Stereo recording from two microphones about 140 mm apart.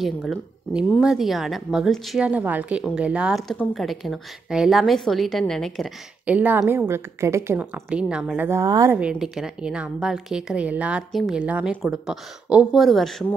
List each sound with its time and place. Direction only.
0.0 s a woman's voice: centre (ahead or behind)
6.2 s a woman's voice: 10° right (ahead or behind)
8.5 s a woman's voice: 20° right (ahead or behind)
8.9 s a woman's voice: 5° right (ahead or behind)